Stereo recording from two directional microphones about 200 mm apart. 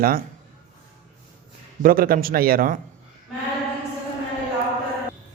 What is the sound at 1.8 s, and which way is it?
Speech, 45° right (ahead or behind).